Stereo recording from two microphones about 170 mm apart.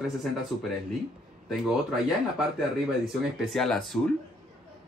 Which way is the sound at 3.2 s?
Centre (ahead or behind).